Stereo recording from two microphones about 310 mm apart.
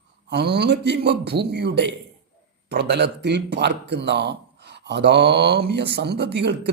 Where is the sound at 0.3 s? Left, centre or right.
Right.